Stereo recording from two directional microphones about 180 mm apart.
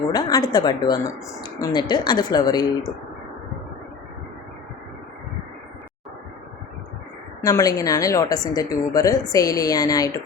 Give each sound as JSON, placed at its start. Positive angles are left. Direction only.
{"t": 0.1, "sound": "speech", "side_deg": 20}
{"t": 7.4, "sound": "speech", "side_deg": 20}